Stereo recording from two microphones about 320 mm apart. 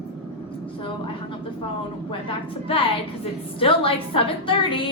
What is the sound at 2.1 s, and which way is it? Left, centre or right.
A woman's voice, centre.